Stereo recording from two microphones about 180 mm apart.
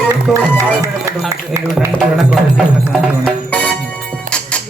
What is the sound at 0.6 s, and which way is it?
Speech, 20° right (ahead or behind).